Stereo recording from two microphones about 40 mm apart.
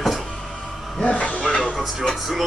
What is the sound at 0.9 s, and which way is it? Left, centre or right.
Speech, left.